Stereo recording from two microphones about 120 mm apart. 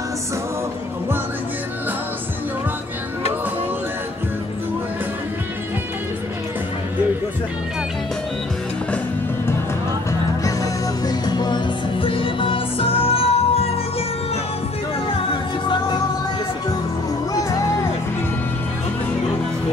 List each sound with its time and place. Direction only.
10.4 s music: 30° left (ahead or behind); by 13.7 s 55° left (ahead or behind)
17.3 s music: 30° left (ahead or behind)